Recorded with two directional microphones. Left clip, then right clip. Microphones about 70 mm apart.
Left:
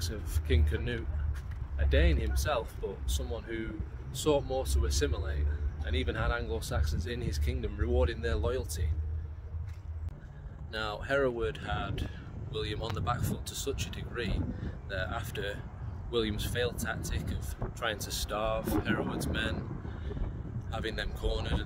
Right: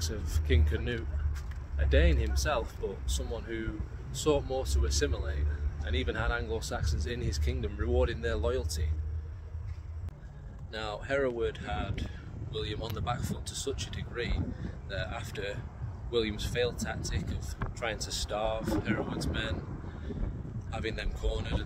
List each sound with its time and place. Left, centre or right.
0.0 s speech: centre
10.7 s speech: left
20.7 s speech: left